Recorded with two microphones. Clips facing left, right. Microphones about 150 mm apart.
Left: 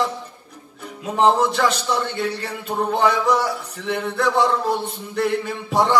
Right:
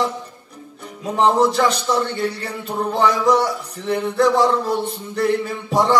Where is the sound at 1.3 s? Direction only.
35° right (ahead or behind).